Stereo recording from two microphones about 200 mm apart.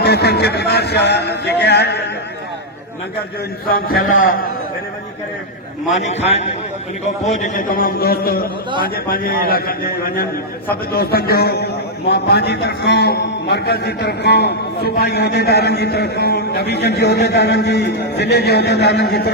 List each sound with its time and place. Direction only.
0.0 s a man's voice: 55° left (ahead or behind)
3.7 s a man's voice: 45° left (ahead or behind)
6.0 s a man's voice: 35° left (ahead or behind); by 19.3 s 55° left (ahead or behind)